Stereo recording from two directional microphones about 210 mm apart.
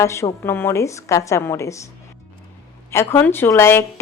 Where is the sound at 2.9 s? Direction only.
10° left (ahead or behind).